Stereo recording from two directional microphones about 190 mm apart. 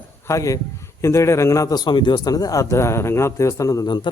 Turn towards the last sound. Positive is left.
turn(degrees=25)  # may be behind; listen again after turning